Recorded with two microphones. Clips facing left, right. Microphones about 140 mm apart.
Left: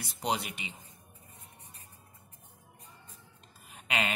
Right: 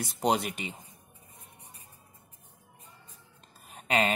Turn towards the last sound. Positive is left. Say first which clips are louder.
# right 6 dB
turn(degrees=-40)  # may be behind; listen again after turning